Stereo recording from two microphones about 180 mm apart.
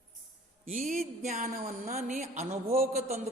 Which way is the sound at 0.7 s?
45° right (ahead or behind).